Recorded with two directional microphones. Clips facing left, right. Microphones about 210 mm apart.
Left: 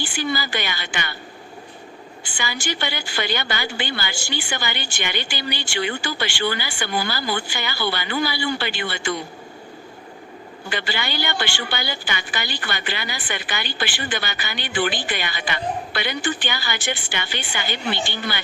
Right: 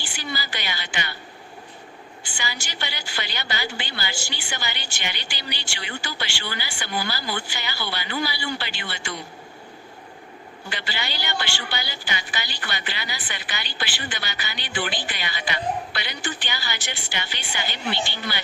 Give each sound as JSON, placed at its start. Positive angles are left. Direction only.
{"t": 0.0, "sound": "a woman's voice", "side_deg": 50}
{"t": 2.4, "sound": "a woman's voice", "side_deg": 55}
{"t": 10.7, "sound": "a woman's voice", "side_deg": 50}